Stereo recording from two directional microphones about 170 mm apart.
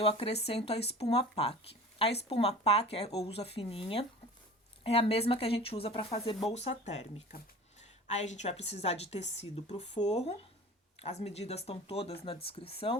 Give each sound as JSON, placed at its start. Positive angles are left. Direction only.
{"t": 0.0, "sound": "a woman's voice", "side_deg": 35}